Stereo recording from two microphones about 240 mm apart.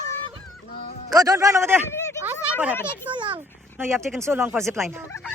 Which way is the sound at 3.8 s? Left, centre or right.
Centre.